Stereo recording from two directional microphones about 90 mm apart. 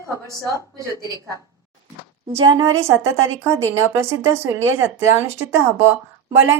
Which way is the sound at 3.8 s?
30° right (ahead or behind).